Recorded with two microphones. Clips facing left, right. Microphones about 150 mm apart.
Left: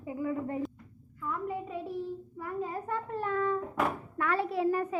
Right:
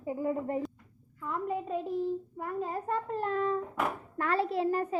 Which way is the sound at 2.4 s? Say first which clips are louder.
Right 1 dB; 40° right (ahead or behind).